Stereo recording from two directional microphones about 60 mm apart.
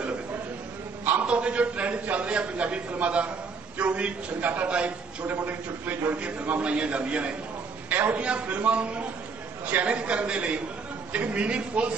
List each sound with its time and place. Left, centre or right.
1.2 s a man's voice: centre